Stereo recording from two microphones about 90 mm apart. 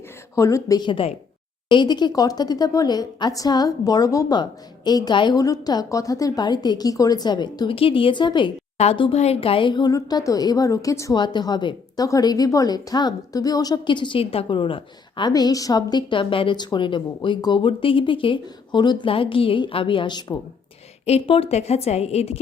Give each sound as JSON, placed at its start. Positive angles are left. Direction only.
{"t": 0.3, "sound": "a woman's voice", "side_deg": 35}
{"t": 0.8, "sound": "speech", "side_deg": 75}
{"t": 1.7, "sound": "a woman's voice", "side_deg": 55}
{"t": 5.4, "sound": "a woman's voice", "side_deg": 45}
{"t": 6.4, "sound": "a woman's voice", "side_deg": 50}
{"t": 7.7, "sound": "speech", "side_deg": 85}
{"t": 9.0, "sound": "speech", "side_deg": 85}
{"t": 9.9, "sound": "a woman's voice", "side_deg": 40}
{"t": 11.1, "sound": "a woman's voice", "side_deg": 55}
{"t": 13.8, "sound": "a woman's voice", "side_deg": 60}
{"t": 15.3, "sound": "a woman's voice", "side_deg": 45}
{"t": 16.6, "sound": "a woman's voice", "side_deg": 55}
{"t": 21.2, "sound": "speech", "side_deg": 90}